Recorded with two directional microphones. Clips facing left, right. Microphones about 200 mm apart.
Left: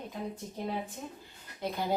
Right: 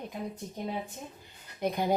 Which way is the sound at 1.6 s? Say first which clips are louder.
Right 4 dB; 15° right (ahead or behind).